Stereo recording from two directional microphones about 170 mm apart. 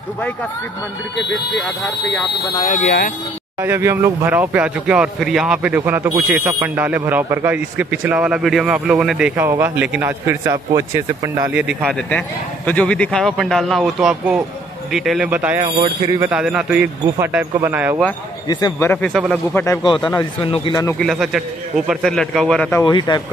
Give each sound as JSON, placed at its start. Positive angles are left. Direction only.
{"t": 2.6, "sound": "speech", "side_deg": 50}
{"t": 3.6, "sound": "speech", "side_deg": -15}
{"t": 11.6, "sound": "speech", "side_deg": 5}
{"t": 18.5, "sound": "speech", "side_deg": 25}
{"t": 18.9, "sound": "speech", "side_deg": 5}
{"t": 19.5, "sound": "speech", "side_deg": 15}
{"t": 20.0, "sound": "speech", "side_deg": 10}
{"t": 20.4, "sound": "speech", "side_deg": 30}
{"t": 21.0, "sound": "speech", "side_deg": 0}
{"t": 22.8, "sound": "speech", "side_deg": 25}